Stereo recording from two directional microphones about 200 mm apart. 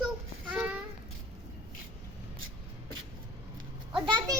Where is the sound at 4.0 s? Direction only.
20° right (ahead or behind).